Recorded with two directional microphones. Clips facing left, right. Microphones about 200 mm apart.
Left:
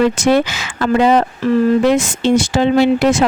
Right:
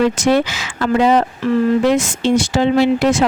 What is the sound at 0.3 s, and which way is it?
Speech, 55° left (ahead or behind).